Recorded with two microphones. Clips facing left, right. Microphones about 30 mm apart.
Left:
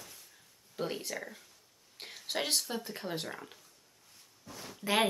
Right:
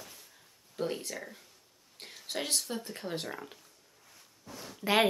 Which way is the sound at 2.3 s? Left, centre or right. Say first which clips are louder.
Left 1 dB; centre.